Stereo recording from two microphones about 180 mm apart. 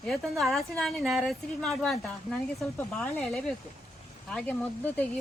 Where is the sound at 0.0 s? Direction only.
Centre (ahead or behind).